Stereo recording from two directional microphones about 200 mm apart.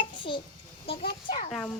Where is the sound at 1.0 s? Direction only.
45° left (ahead or behind).